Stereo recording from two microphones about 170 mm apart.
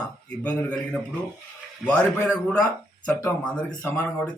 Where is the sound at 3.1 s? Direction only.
20° left (ahead or behind).